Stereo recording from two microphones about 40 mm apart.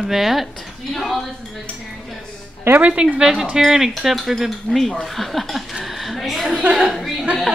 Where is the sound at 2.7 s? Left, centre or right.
Right.